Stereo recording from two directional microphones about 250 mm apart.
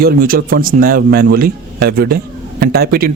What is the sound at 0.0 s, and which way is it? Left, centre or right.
A man's voice, right.